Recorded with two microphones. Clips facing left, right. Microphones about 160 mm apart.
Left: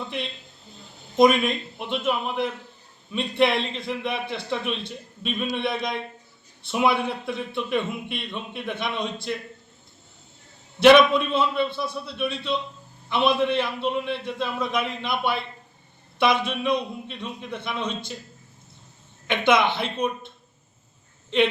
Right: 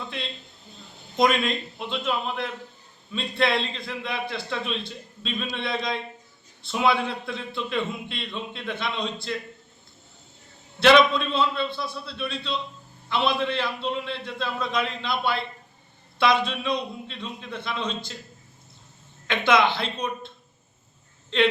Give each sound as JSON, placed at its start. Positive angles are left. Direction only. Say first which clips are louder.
{"t": 1.2, "sound": "a man's voice", "louder": "left 4 dB", "side_deg": 15}
{"t": 10.8, "sound": "a man's voice", "louder": "left 3 dB", "side_deg": 15}
{"t": 19.3, "sound": "a man's voice", "louder": "left 1 dB", "side_deg": 20}